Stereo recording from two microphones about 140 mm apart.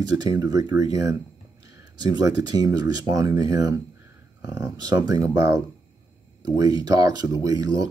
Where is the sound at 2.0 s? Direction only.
25° right (ahead or behind).